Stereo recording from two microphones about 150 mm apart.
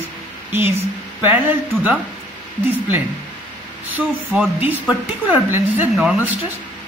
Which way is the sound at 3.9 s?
10° right (ahead or behind).